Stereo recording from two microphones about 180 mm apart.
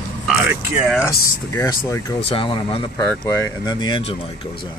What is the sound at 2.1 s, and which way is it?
Speech, 30° left (ahead or behind).